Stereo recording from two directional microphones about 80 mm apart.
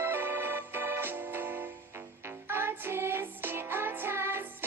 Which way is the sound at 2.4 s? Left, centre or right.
Right.